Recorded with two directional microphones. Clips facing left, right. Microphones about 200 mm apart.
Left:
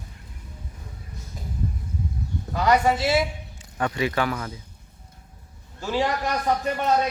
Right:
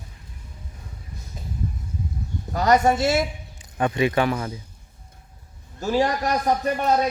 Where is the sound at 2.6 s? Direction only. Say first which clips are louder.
Right 2 dB; 45° right (ahead or behind).